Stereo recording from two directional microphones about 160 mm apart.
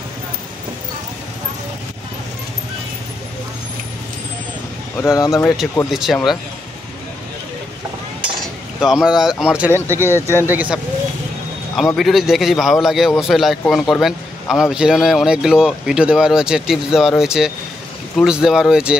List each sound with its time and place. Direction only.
4.9 s speech: 20° left (ahead or behind)
5.9 s a man's voice: centre (ahead or behind)
8.8 s a man's voice: 5° right (ahead or behind)
9.8 s speech: 15° right (ahead or behind)
11.7 s a man's voice: centre (ahead or behind)